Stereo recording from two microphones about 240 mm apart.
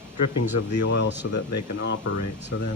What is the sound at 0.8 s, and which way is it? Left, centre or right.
Speech, left.